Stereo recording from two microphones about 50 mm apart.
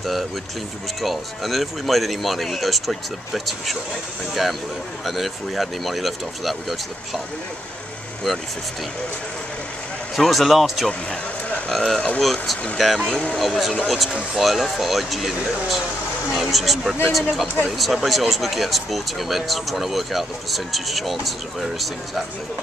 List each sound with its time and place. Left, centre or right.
0.0 s speech: centre
10.1 s speech: centre
10.9 s speech: left
11.7 s speech: centre